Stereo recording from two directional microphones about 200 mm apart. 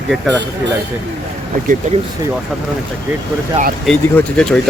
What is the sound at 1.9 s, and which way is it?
Speech, 35° right (ahead or behind).